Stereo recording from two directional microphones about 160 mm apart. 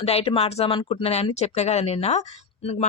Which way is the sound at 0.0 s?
40° left (ahead or behind).